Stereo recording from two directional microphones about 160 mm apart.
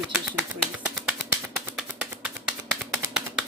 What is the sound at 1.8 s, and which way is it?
Finger snapping, 5° right (ahead or behind).